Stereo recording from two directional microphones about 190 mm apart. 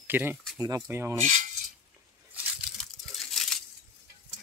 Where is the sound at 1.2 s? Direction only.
40° right (ahead or behind).